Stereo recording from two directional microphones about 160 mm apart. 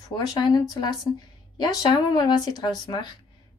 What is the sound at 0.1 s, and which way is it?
A woman's voice, 25° left (ahead or behind).